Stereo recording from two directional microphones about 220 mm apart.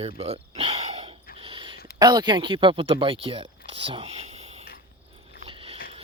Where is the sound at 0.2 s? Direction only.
25° right (ahead or behind).